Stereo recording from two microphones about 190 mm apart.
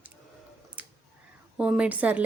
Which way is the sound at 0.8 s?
5° right (ahead or behind).